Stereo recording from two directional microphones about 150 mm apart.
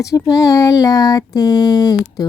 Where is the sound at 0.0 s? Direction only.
20° left (ahead or behind).